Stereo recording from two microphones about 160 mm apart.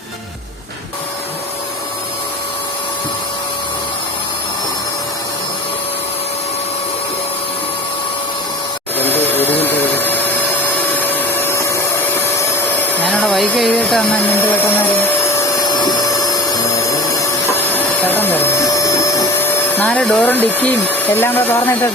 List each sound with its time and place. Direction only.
9.0 s a sound: 10° left (ahead or behind)
10.9 s vacuum cleaner: 10° left (ahead or behind)
13.0 s vacuum cleaner: 10° left (ahead or behind)
16.8 s printer: 15° left (ahead or behind)
19.8 s speech: 5° left (ahead or behind)